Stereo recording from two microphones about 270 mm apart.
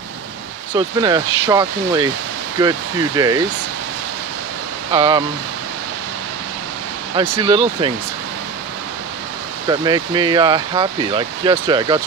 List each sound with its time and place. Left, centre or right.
0.7 s speech: centre
4.9 s speech: centre
7.2 s speech: centre
9.7 s speech: centre